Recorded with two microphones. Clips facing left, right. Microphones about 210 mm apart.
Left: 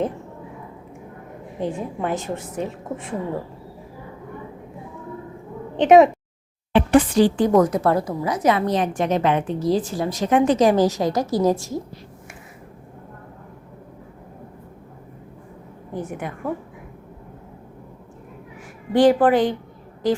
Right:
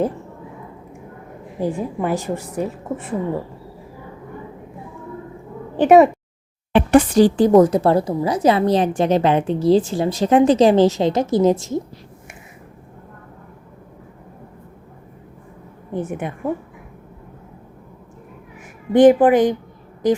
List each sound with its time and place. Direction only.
1.5 s a woman's voice: 5° right (ahead or behind)
5.7 s a woman's voice: 5° right (ahead or behind)
6.7 s speech: 45° right (ahead or behind); by 11.8 s 20° right (ahead or behind)
15.9 s speech: 25° right (ahead or behind)
18.9 s a woman's voice: 20° right (ahead or behind)